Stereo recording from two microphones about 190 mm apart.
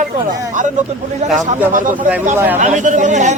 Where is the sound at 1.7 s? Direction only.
45° right (ahead or behind).